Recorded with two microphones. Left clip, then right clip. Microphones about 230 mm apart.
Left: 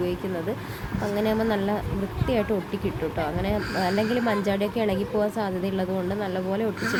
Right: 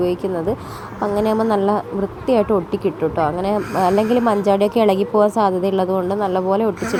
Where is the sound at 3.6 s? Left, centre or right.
Centre.